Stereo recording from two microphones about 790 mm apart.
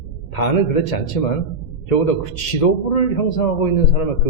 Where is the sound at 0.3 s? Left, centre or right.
Left.